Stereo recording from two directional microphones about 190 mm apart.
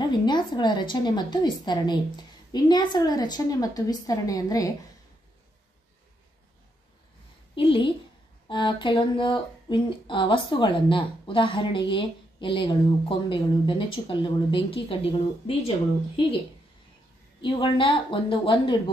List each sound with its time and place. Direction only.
0.0 s speech: 25° left (ahead or behind)
7.5 s speech: 25° left (ahead or behind)
17.4 s speech: 25° left (ahead or behind)